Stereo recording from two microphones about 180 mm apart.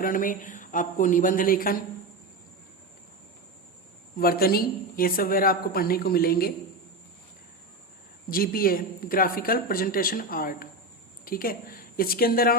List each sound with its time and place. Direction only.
0.0 s speech: 50° left (ahead or behind)
4.2 s a woman's voice: 55° left (ahead or behind)
8.3 s a woman's voice: 55° left (ahead or behind)